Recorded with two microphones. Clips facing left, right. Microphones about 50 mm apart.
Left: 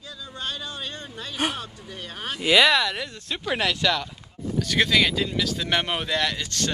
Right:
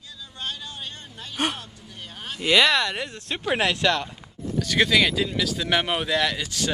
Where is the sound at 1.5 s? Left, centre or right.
Left.